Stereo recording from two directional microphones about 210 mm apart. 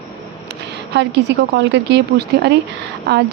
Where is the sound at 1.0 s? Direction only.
55° right (ahead or behind).